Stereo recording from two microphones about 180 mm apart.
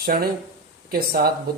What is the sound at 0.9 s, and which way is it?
Speech, 55° right (ahead or behind).